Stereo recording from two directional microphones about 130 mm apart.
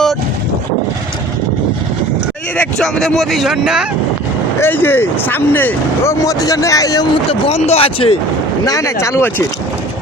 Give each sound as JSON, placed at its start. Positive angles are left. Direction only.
{"t": 2.6, "sound": "speech", "side_deg": 5}
{"t": 4.6, "sound": "speech", "side_deg": 15}
{"t": 7.3, "sound": "speech", "side_deg": 50}
{"t": 8.6, "sound": "speech", "side_deg": 25}